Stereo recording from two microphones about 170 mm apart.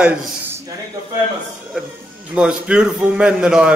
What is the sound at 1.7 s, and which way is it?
A man's voice, 5° right (ahead or behind).